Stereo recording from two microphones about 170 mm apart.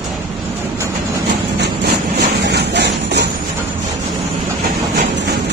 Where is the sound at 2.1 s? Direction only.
80° right.